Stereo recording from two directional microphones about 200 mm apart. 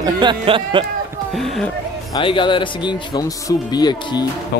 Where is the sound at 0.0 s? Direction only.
20° right (ahead or behind).